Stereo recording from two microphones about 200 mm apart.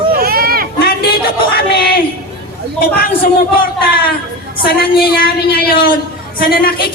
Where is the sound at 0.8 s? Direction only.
50° left (ahead or behind).